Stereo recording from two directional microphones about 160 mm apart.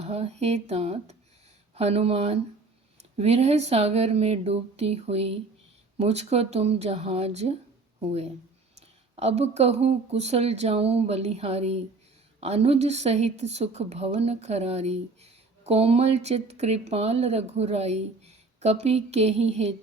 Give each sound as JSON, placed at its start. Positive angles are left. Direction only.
{"t": 0.0, "sound": "a woman's voice", "side_deg": -40}
{"t": 9.1, "sound": "a woman's voice", "side_deg": -40}